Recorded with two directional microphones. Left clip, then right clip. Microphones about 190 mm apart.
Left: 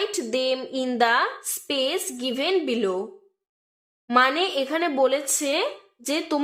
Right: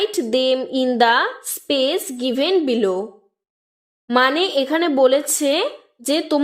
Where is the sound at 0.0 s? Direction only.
40° right (ahead or behind).